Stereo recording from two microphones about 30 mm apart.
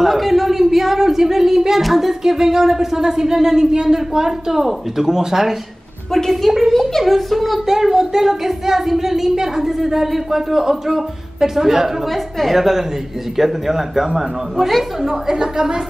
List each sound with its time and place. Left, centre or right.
0.0 s a man's voice: centre
6.1 s a woman's voice: centre
7.6 s speech: centre
12.1 s a child's voice: centre
12.5 s speech: centre